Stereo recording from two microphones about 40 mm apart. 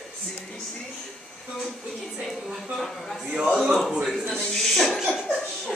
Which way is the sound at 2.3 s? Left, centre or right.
Centre.